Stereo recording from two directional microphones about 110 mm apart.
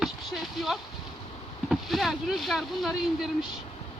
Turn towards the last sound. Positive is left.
turn(degrees=0)  # may be behind; listen again after turning